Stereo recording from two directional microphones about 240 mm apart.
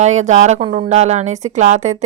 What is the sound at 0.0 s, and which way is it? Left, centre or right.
Speech, right.